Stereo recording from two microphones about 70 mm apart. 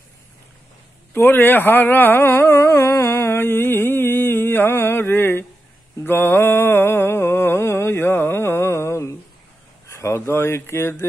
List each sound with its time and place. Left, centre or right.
1.1 s a sound: left
6.0 s mantra: left
9.8 s speech: left